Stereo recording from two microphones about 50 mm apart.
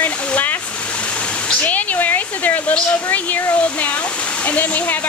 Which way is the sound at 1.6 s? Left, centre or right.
Left.